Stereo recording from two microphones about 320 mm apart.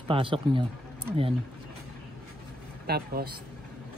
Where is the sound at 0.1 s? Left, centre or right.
Centre.